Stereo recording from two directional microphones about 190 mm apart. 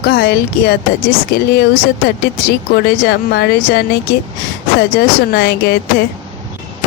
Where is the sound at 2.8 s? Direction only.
60° left (ahead or behind).